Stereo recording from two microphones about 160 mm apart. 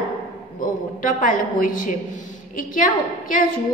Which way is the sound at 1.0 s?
55° left (ahead or behind).